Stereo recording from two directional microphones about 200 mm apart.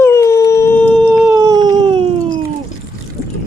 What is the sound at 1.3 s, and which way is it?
Cat, 15° right (ahead or behind).